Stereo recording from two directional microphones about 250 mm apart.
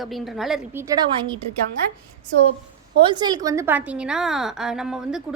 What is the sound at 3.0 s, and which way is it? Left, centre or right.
A woman's voice, centre.